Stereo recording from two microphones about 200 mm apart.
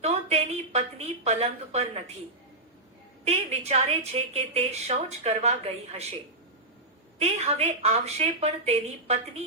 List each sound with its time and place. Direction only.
0.0 s a sound: 35° right (ahead or behind)
3.2 s a woman's voice: 30° right (ahead or behind)
7.2 s a woman's voice: 30° right (ahead or behind)